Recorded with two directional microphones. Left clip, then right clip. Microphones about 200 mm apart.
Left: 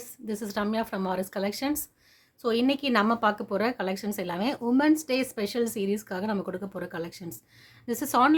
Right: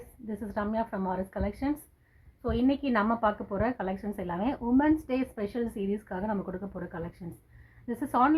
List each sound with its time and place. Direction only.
0.3 s speech: 40° left (ahead or behind)